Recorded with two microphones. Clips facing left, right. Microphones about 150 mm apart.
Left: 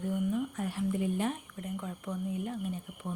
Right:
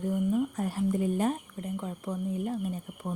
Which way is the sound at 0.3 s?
40° right (ahead or behind).